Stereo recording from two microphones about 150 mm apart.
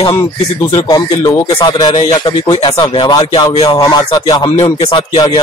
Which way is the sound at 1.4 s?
30° left (ahead or behind).